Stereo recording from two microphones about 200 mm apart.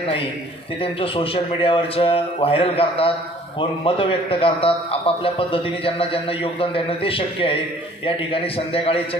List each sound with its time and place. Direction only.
0.8 s a man's voice: 25° left (ahead or behind)